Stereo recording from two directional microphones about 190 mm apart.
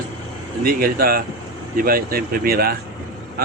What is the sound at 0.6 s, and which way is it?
A man's voice, 50° right (ahead or behind).